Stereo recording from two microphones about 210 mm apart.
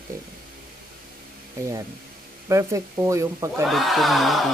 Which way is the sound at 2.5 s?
15° right (ahead or behind).